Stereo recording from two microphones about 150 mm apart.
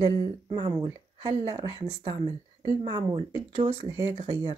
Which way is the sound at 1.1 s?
40° right (ahead or behind).